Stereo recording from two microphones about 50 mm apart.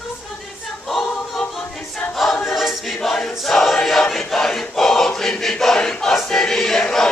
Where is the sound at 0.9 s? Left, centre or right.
Centre.